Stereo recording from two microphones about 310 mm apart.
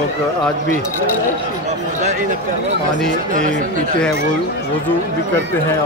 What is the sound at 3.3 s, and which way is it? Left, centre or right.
Speech, right.